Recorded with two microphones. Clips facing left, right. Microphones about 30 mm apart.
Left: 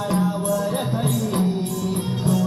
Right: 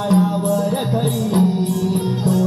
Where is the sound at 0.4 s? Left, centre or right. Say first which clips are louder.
Right 4 dB; right.